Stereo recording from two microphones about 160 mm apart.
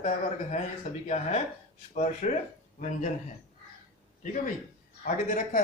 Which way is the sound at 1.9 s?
45° left (ahead or behind).